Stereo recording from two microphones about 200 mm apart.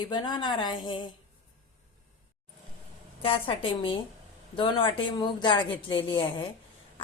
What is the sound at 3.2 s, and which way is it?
A woman's voice, 25° left (ahead or behind).